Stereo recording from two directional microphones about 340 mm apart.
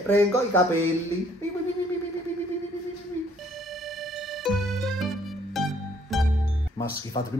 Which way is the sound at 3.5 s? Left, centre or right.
Centre.